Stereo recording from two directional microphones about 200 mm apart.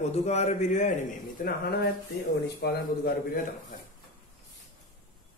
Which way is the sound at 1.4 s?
50° left (ahead or behind).